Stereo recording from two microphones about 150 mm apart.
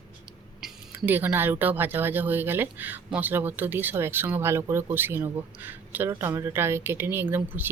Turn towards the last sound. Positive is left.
turn(degrees=-15)  # may be behind; listen again after turning